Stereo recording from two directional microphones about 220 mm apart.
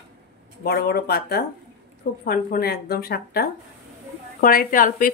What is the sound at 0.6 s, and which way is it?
A woman's voice, 45° left (ahead or behind).